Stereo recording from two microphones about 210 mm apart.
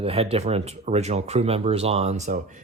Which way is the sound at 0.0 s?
30° right (ahead or behind).